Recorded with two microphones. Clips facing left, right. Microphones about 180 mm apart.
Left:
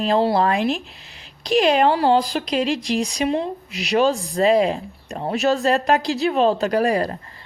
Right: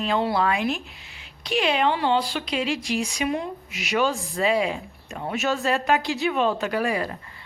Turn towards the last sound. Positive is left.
turn(degrees=40)  # may be behind; listen again after turning